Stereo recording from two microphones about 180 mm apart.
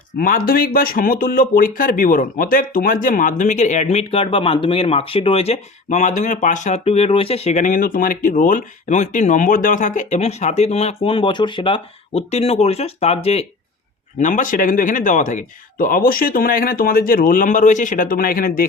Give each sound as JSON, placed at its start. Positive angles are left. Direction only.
{"t": 0.2, "sound": "speech", "side_deg": 55}
{"t": 14.2, "sound": "speech", "side_deg": 45}